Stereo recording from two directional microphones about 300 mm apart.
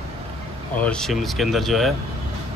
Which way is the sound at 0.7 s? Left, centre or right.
Centre.